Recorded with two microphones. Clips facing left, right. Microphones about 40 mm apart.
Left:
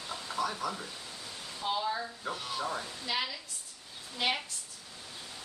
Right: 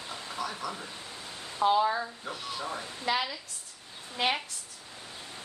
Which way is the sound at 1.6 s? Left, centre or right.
Right.